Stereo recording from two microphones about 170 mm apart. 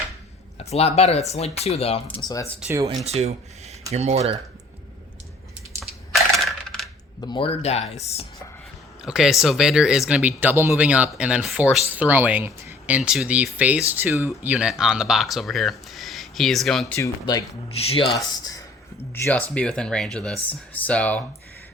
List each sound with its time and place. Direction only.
0.6 s speech: 40° left (ahead or behind)
2.2 s speech: 20° left (ahead or behind)
2.6 s speech: 15° right (ahead or behind)
3.0 s speech: 40° right (ahead or behind)
6.3 s coin: centre (ahead or behind)
7.2 s speech: 30° left (ahead or behind)
9.0 s speech: 5° right (ahead or behind)
17.0 s speech: 20° left (ahead or behind)
17.7 s speech: 35° left (ahead or behind)
18.3 s speech: 20° left (ahead or behind)
19.1 s speech: 10° left (ahead or behind)